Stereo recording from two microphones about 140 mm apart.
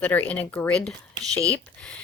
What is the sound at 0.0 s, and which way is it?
Speech, 10° left (ahead or behind).